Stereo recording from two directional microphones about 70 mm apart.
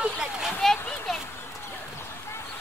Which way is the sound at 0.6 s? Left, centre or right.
Centre.